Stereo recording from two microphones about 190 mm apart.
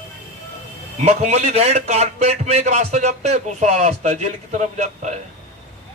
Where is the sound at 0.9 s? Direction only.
35° right (ahead or behind).